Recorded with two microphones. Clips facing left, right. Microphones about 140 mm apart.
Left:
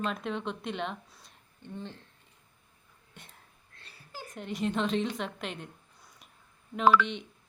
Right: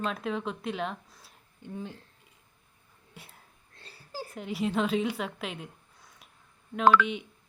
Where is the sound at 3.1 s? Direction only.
5° right (ahead or behind).